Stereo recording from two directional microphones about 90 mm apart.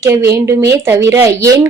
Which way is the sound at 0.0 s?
35° right (ahead or behind).